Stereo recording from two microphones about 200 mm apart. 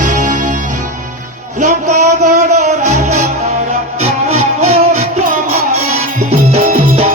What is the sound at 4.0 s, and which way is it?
Music, 30° right (ahead or behind).